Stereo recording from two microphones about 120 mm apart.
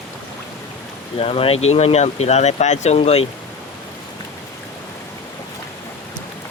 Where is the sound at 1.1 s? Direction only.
50° left (ahead or behind).